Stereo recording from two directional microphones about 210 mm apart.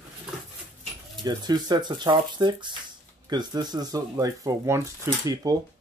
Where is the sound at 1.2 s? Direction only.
20° right (ahead or behind).